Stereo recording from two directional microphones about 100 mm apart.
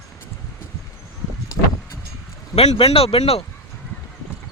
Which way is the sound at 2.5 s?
80° left.